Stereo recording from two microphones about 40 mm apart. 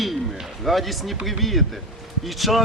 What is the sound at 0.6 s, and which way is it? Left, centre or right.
A man's voice, centre.